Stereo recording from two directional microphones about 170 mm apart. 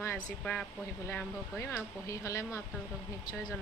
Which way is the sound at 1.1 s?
15° left (ahead or behind).